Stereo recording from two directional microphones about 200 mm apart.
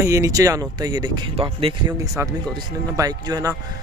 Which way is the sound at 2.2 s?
15° right (ahead or behind).